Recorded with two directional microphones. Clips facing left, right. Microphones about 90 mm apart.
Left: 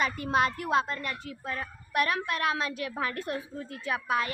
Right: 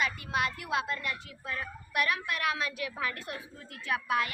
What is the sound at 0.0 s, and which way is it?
Speech, 40° left (ahead or behind).